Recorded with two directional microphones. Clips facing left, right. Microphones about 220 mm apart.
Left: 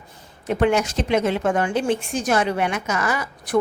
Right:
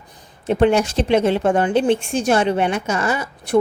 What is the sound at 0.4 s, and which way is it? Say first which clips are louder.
A woman's voice: right 4 dB; 30° right (ahead or behind).